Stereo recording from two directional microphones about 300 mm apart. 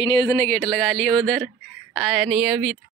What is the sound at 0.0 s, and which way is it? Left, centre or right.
Speech, centre.